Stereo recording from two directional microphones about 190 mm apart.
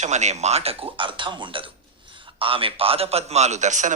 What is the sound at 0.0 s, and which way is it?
A man's voice, 35° right (ahead or behind).